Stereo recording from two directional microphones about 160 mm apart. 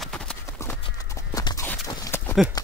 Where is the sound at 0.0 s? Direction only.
5° left (ahead or behind).